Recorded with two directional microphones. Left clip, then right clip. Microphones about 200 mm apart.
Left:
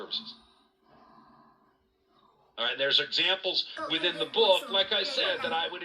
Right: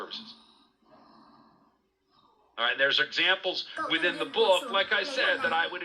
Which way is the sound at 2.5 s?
Centre (ahead or behind).